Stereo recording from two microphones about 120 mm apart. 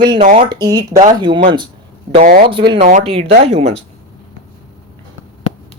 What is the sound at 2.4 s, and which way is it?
Speech, 45° right (ahead or behind).